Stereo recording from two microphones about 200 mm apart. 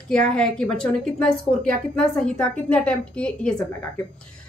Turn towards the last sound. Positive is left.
turn(degrees=5)  # may be behind; listen again after turning